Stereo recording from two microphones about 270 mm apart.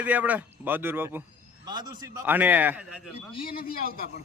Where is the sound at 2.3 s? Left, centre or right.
Centre.